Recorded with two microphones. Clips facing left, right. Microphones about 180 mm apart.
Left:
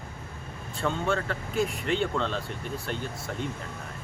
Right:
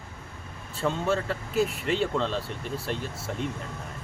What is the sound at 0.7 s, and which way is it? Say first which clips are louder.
Speech: right 1 dB; centre (ahead or behind).